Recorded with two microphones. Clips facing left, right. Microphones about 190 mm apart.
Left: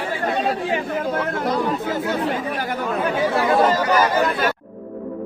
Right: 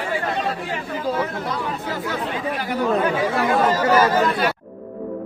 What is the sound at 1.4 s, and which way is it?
Speech, 40° left (ahead or behind).